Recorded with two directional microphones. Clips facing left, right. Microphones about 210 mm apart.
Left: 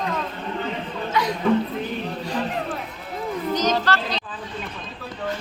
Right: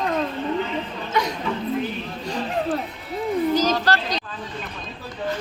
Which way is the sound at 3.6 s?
35° right (ahead or behind).